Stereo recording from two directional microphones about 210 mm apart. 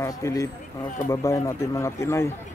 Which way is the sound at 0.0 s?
15° left (ahead or behind).